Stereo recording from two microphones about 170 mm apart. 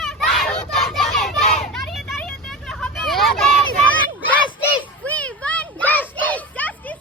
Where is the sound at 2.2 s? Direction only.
5° left (ahead or behind).